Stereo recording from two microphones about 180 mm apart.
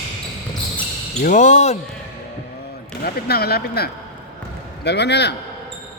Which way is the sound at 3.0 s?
60° left (ahead or behind).